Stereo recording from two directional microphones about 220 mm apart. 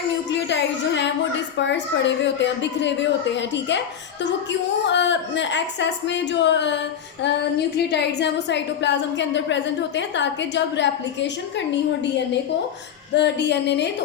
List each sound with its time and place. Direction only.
0.3 s a woman's voice: 55° left (ahead or behind)
4.9 s a woman's voice: 55° left (ahead or behind)
7.9 s a woman's voice: 50° left (ahead or behind)
13.1 s a woman's voice: 50° left (ahead or behind)